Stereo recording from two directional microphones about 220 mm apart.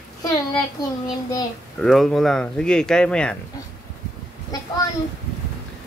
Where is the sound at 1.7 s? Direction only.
Centre (ahead or behind).